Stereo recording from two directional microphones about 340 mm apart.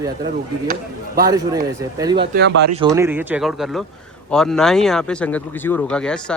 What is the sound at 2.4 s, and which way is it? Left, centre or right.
Speech, right.